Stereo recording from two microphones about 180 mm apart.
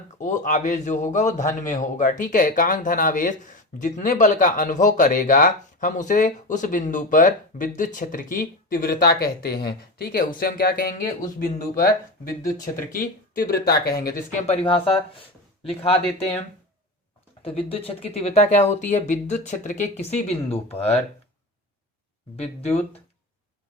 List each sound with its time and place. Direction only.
0.2 s speech: 45° left (ahead or behind)
12.3 s speech: 20° left (ahead or behind)
12.9 s speech: 55° left (ahead or behind); by 16.3 s 35° left (ahead or behind)
17.4 s speech: 30° left (ahead or behind)
22.4 s speech: 35° left (ahead or behind)